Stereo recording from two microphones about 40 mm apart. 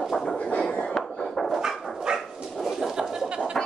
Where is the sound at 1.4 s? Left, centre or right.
Centre.